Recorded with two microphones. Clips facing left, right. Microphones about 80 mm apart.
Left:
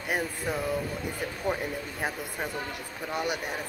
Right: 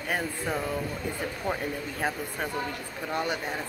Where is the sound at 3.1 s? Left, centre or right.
Centre.